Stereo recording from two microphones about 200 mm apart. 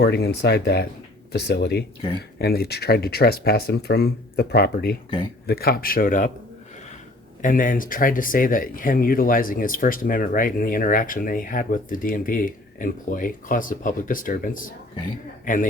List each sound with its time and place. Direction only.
0.0 s speech: 55° left (ahead or behind)
7.4 s a man's voice: 45° left (ahead or behind)